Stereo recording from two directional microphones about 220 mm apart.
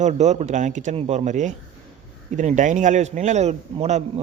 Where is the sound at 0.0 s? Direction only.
30° right (ahead or behind).